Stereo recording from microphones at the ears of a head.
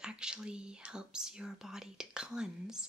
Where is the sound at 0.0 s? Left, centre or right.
Centre.